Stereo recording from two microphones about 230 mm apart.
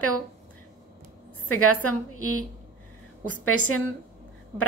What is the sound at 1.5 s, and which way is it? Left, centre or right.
Speech, left.